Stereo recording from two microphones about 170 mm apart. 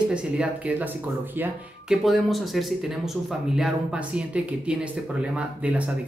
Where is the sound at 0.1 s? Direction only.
5° right (ahead or behind).